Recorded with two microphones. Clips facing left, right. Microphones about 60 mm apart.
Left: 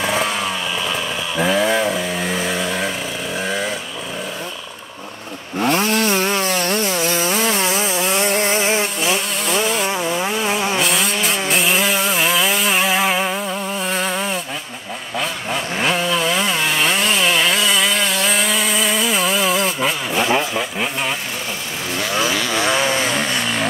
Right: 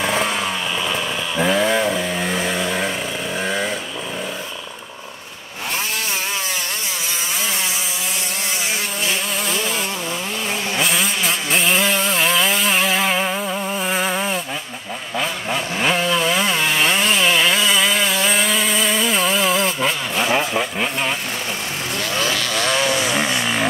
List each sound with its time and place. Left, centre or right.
0.0 s chainsaw: centre
3.3 s vehicle: centre
5.7 s wood: left
9.0 s a sound: centre
10.3 s vehicle: centre
10.8 s chainsaw: centre
22.1 s vehicle: centre
23.0 s vehicle: centre